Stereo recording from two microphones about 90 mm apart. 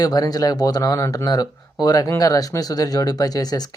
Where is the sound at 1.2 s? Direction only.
45° left (ahead or behind).